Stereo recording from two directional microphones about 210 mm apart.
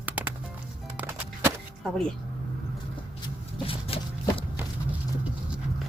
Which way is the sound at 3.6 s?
25° left (ahead or behind).